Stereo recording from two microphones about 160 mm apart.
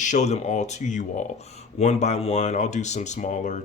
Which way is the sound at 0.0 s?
50° left (ahead or behind).